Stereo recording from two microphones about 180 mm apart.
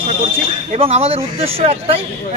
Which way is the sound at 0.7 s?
35° right (ahead or behind).